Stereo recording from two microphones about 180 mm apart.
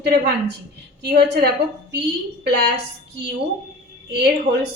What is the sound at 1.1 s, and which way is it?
Speech, 70° right (ahead or behind).